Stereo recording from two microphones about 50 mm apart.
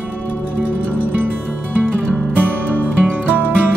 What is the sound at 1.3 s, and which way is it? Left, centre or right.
Music, right.